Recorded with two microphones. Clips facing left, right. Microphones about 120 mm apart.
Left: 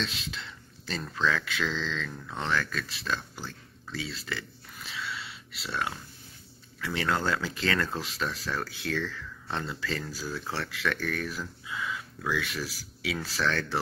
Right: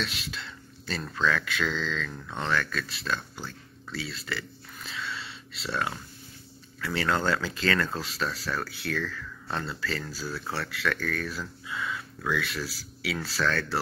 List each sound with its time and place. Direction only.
0.0 s speech: 20° left (ahead or behind)
3.9 s a sound: 15° left (ahead or behind)
6.8 s speech: 15° left (ahead or behind)